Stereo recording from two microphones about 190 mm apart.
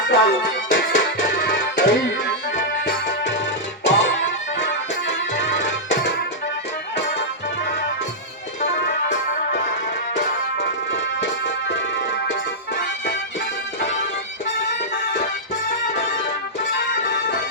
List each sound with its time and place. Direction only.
0.1 s music: 65° left (ahead or behind)
0.7 s music: 45° left (ahead or behind)
1.5 s music: 75° left (ahead or behind)
3.8 s music: 70° left (ahead or behind)
8.6 s music: 70° left (ahead or behind)